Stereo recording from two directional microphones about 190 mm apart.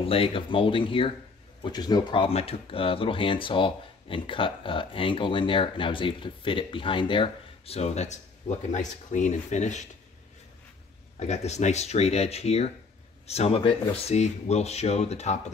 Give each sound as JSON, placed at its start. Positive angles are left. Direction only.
{"t": 0.0, "sound": "speech", "side_deg": 30}
{"t": 11.1, "sound": "speech", "side_deg": 35}